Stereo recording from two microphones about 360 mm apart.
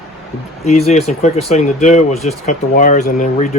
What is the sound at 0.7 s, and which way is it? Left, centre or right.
Speech, centre.